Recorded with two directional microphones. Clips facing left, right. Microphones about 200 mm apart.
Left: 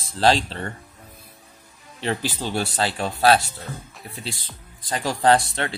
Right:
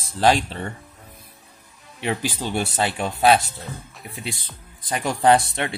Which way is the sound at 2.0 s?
15° right (ahead or behind).